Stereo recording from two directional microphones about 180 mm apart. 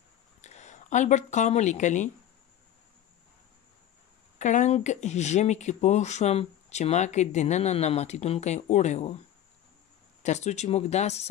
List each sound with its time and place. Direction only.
0.4 s speech: 40° left (ahead or behind)
4.4 s speech: 40° left (ahead or behind)
10.2 s speech: 40° left (ahead or behind)